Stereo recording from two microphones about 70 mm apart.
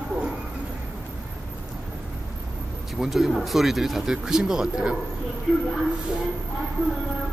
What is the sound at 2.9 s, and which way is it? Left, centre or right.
Speech, centre.